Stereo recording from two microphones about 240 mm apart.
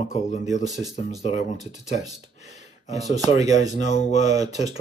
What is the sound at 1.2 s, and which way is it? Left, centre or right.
Speech, left.